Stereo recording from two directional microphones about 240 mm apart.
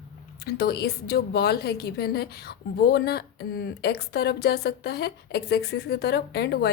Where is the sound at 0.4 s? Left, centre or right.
Left.